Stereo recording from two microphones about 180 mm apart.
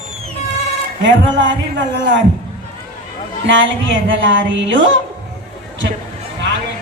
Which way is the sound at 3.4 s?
90° right.